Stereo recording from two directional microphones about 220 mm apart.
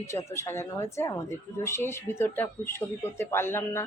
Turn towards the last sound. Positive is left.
turn(degrees=10)  # may be behind; listen again after turning